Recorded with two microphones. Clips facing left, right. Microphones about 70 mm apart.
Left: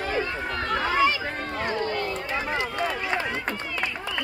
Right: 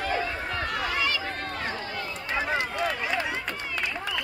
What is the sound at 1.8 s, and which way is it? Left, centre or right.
Run, left.